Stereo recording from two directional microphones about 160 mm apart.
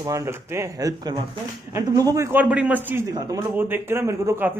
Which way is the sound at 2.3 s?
10° right (ahead or behind).